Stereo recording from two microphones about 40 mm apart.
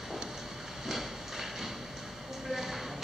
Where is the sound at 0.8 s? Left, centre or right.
Centre.